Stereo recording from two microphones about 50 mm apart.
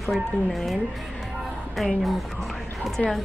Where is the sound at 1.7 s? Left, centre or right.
Centre.